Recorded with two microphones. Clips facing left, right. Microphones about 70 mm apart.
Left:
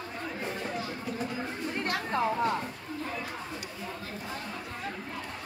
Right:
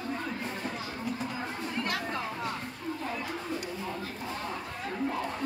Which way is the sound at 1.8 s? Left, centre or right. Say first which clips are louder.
Left 4 dB; left.